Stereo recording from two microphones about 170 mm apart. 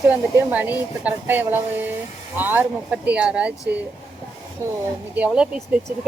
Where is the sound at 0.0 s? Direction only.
10° right (ahead or behind).